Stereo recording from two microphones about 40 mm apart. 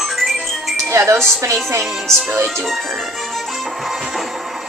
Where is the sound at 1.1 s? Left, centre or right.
Centre.